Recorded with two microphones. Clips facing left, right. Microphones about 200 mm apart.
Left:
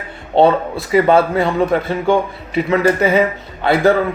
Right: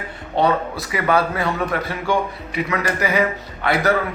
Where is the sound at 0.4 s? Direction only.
30° left (ahead or behind).